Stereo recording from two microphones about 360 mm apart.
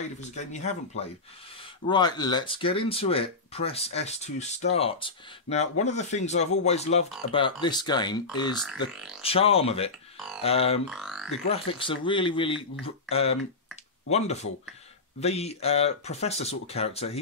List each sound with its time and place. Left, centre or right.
0.2 s speech: centre
9.2 s speech: centre
10.9 s music: centre
11.4 s speech: centre